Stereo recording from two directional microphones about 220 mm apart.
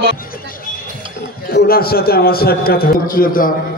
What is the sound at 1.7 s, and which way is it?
A man's voice, 45° left (ahead or behind).